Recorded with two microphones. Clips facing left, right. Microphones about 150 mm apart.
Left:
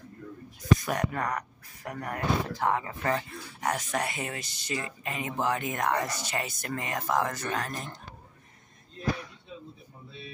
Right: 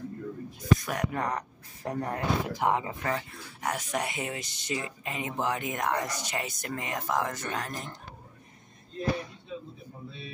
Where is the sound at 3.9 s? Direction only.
15° right (ahead or behind).